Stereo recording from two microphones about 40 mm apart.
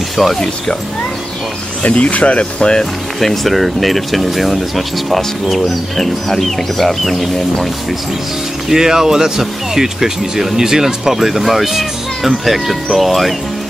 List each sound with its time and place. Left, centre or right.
0.2 s speech: centre
1.8 s speech: left
2.8 s speech: centre
8.6 s speech: centre